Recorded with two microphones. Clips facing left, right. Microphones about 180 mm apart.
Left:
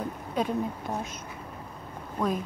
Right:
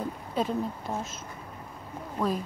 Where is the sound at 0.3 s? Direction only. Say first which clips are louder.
Left 1 dB; centre (ahead or behind).